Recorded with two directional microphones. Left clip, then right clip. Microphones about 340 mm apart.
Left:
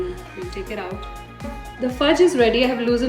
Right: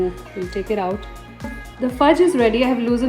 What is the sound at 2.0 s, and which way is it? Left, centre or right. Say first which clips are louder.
Speech: right 1 dB; centre.